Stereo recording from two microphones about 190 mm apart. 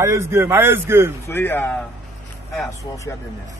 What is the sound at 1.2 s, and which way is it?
Speech, 10° left (ahead or behind).